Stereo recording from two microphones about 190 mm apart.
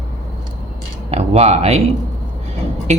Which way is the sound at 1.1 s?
30° right (ahead or behind).